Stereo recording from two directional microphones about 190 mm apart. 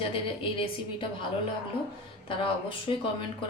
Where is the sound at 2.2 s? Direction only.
30° left (ahead or behind).